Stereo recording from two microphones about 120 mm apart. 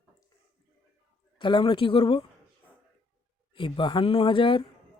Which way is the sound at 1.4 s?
40° left (ahead or behind).